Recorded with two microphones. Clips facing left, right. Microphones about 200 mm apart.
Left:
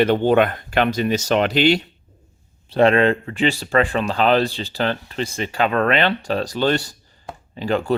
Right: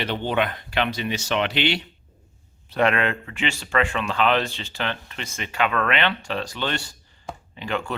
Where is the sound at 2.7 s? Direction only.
30° left (ahead or behind).